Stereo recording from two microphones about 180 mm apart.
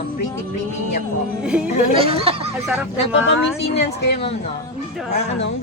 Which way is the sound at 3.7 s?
70° left (ahead or behind).